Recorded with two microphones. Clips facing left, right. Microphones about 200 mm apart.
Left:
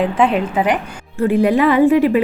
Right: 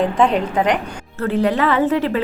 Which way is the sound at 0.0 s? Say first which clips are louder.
Left 1 dB; 5° left (ahead or behind).